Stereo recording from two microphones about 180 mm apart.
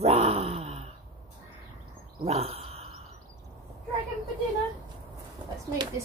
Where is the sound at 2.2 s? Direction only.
35° right (ahead or behind).